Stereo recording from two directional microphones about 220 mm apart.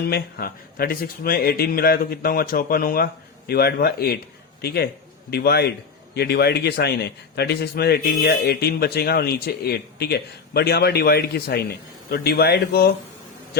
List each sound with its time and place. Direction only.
0.0 s a man's voice: 45° left (ahead or behind)